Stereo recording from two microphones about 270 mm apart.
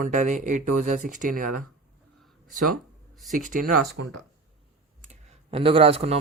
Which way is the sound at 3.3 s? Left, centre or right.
Right.